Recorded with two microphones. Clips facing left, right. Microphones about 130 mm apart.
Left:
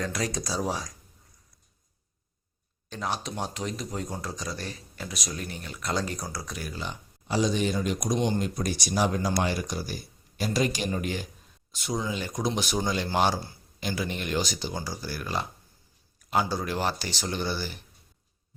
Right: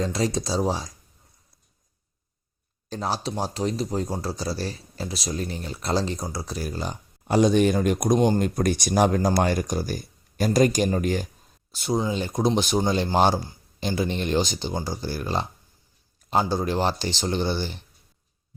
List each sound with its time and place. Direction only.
0.0 s speech: 25° right (ahead or behind)
2.9 s speech: 35° right (ahead or behind)
7.3 s speech: 55° right (ahead or behind); by 17.8 s 30° right (ahead or behind)